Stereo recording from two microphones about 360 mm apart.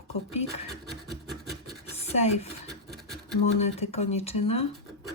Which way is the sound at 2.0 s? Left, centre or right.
Centre.